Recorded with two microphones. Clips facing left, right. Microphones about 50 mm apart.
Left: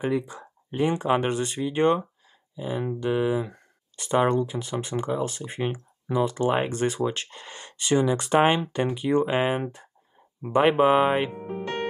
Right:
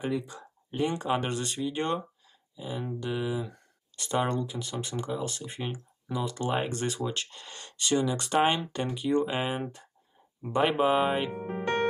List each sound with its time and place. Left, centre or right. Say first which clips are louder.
0.0 s speech: left 5 dB; left